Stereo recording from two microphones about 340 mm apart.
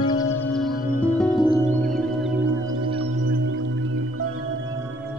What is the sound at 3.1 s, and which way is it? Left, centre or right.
Music, right.